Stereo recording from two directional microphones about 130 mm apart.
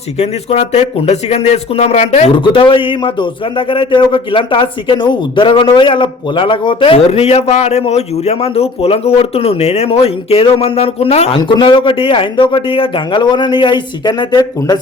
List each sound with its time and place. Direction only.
0.2 s speech: 55° left (ahead or behind)
2.4 s a man's voice: 40° left (ahead or behind)
11.3 s speech: 40° left (ahead or behind)